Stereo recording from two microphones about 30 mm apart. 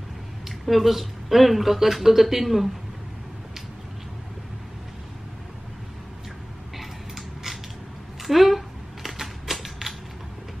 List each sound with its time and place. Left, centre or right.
0.5 s speech: centre
6.8 s creak: centre
8.2 s typewriter: centre